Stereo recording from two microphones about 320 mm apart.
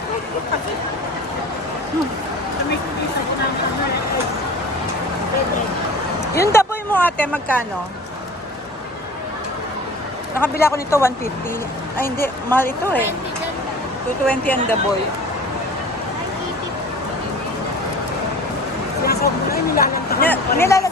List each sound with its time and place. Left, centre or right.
6.3 s speech: centre
10.3 s speech: centre
12.2 s speech: centre
14.3 s speech: centre
19.0 s a sound: left
20.3 s speech: centre